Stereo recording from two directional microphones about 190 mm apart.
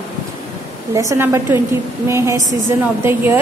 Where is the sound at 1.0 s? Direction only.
15° right (ahead or behind).